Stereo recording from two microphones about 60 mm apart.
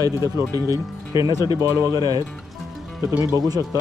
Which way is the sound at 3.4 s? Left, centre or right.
Right.